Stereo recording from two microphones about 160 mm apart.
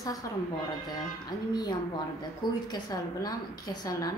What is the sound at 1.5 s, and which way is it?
A woman's voice, 25° left (ahead or behind).